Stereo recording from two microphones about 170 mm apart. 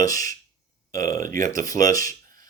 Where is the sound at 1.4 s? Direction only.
20° left (ahead or behind).